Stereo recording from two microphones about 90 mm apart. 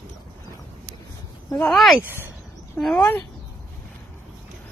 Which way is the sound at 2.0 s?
25° right (ahead or behind).